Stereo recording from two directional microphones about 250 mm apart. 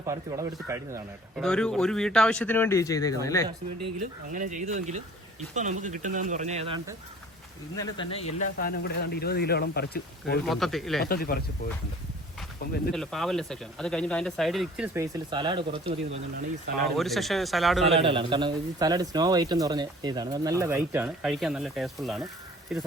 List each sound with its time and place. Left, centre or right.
0.1 s a man's voice: centre
1.4 s speech: centre
4.3 s speech: right
7.8 s speech: left
8.5 s speech: left
10.4 s speech: centre
11.0 s speech: left
12.9 s speech: centre
14.9 s a man's voice: centre
17.0 s speech: centre
18.0 s a man's voice: centre